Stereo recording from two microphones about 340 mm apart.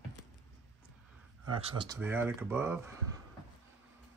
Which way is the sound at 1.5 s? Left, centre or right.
Centre.